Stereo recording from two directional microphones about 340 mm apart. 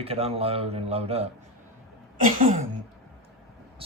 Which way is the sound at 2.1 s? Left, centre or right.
Right.